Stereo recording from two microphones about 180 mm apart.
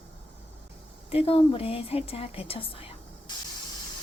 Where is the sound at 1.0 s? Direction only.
35° left (ahead or behind).